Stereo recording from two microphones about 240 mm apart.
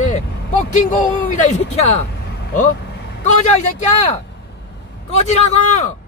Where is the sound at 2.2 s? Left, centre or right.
Left.